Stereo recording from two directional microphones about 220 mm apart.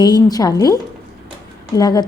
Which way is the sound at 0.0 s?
15° left (ahead or behind).